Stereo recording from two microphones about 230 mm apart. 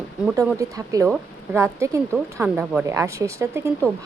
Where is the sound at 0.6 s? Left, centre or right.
Centre.